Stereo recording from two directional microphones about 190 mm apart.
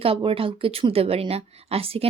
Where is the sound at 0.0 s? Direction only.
30° right (ahead or behind).